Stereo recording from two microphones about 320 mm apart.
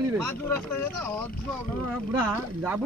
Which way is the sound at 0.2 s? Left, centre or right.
Centre.